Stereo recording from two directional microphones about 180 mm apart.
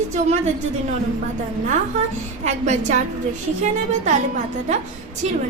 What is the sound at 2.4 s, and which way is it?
A woman's voice, 40° right (ahead or behind).